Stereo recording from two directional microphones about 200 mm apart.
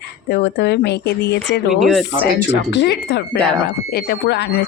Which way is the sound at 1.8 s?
Centre (ahead or behind).